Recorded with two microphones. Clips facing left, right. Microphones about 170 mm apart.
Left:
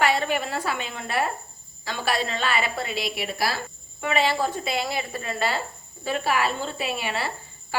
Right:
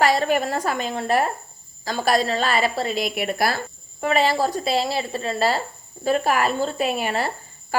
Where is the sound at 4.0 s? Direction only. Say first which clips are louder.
Right 4 dB; 40° right (ahead or behind).